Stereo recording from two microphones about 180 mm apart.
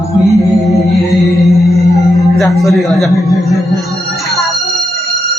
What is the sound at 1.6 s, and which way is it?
Music, 15° left (ahead or behind).